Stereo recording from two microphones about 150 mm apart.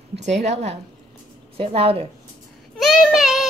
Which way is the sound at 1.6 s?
40° right (ahead or behind).